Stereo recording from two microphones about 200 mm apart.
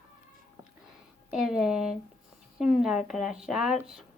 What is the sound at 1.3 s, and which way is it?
A woman's voice, centre (ahead or behind).